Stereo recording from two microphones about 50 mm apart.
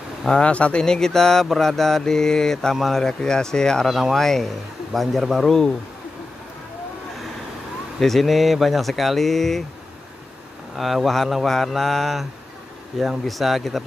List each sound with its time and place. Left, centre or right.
0.4 s speech: left
0.8 s mantra: centre
2.7 s speech: centre
3.0 s mantra: centre
3.8 s speech: centre
8.0 s speech: centre
10.8 s speech: centre
13.3 s speech: centre